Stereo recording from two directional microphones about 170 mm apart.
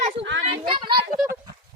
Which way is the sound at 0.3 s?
90° right.